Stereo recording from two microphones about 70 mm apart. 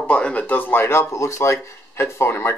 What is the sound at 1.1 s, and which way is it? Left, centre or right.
Speech, left.